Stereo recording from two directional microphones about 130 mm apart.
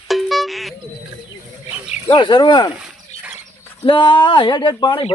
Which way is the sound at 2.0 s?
40° left (ahead or behind).